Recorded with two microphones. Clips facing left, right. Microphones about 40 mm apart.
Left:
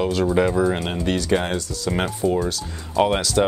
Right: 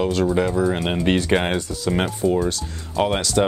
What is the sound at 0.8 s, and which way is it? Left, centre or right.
Speech, right.